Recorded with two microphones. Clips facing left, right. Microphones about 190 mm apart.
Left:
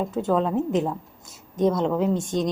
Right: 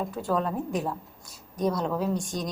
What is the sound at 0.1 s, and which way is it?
A woman's voice, 25° left (ahead or behind).